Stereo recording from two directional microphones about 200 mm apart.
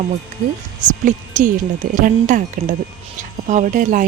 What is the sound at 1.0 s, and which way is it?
Speech, 40° right (ahead or behind).